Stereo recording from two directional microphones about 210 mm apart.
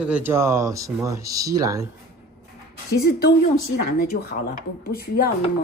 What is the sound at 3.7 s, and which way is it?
A woman's voice, 45° left (ahead or behind).